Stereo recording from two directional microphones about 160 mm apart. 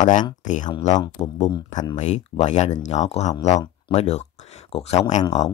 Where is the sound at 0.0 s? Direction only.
50° left (ahead or behind).